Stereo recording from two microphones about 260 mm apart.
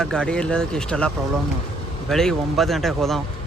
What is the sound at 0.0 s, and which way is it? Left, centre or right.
Speech, centre.